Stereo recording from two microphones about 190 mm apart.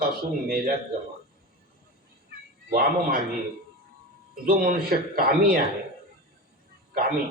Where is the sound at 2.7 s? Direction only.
50° right (ahead or behind).